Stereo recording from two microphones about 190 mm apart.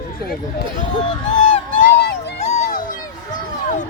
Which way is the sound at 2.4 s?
35° left (ahead or behind).